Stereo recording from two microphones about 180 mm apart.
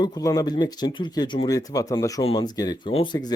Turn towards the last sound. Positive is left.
turn(degrees=25)  # may be behind; listen again after turning